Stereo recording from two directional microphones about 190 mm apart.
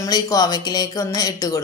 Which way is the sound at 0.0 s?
20° left (ahead or behind).